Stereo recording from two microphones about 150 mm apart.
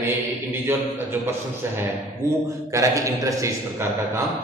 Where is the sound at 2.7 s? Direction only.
20° right (ahead or behind).